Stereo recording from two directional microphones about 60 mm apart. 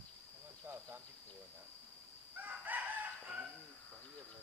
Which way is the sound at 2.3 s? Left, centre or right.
Right.